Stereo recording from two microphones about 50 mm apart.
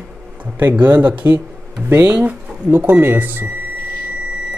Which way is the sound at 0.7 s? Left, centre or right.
Right.